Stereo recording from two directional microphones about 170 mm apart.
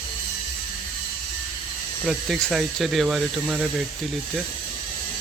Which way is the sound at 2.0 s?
Centre (ahead or behind).